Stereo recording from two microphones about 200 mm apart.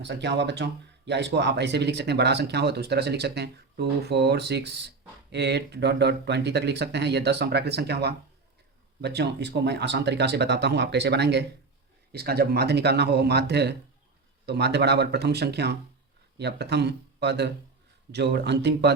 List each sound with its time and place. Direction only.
0.0 s speech: 60° right (ahead or behind)